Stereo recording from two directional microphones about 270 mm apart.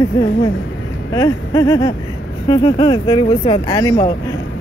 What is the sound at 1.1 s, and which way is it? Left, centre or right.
Speech, centre.